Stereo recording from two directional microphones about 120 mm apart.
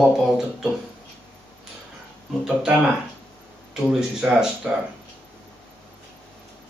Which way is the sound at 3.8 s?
5° right (ahead or behind).